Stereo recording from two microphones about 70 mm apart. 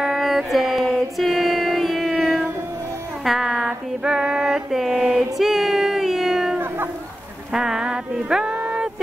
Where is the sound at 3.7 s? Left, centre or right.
Centre.